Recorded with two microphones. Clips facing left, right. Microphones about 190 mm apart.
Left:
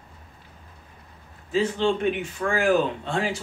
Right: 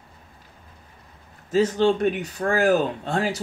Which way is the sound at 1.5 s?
40° right (ahead or behind).